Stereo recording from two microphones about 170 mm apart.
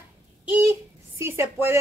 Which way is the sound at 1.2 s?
15° right (ahead or behind).